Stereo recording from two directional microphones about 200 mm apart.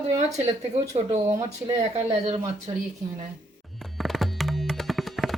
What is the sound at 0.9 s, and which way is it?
Speech, 35° right (ahead or behind).